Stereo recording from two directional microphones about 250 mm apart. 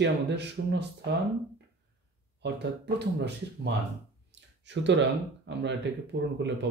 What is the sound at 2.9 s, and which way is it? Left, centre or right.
Speech, right.